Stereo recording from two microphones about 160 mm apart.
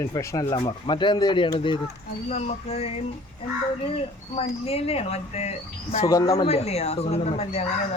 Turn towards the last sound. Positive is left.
turn(degrees=40)  # may be behind; listen again after turning